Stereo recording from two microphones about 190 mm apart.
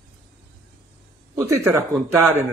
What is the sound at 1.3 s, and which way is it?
Speech, 15° right (ahead or behind).